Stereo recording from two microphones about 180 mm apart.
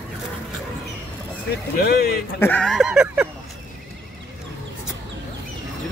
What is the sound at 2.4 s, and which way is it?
Speech, 5° left (ahead or behind).